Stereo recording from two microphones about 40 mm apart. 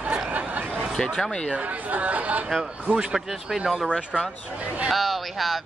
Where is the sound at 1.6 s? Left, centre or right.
Right.